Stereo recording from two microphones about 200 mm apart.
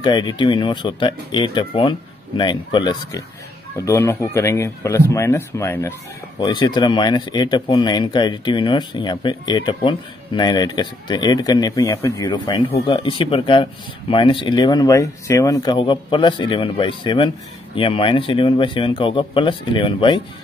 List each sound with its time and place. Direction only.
0.0 s speech: 20° left (ahead or behind)